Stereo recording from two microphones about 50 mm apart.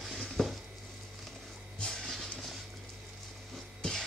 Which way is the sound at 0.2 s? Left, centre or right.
Centre.